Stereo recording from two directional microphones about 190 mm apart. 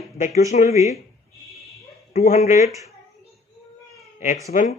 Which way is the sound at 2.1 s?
35° left (ahead or behind).